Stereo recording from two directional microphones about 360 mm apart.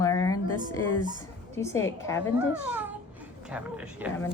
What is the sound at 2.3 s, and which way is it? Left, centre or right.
A man's voice, centre.